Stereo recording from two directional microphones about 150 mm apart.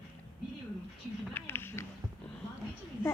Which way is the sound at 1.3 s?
15° left (ahead or behind).